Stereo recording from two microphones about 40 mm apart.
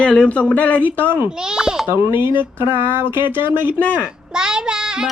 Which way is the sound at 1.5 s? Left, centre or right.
Centre.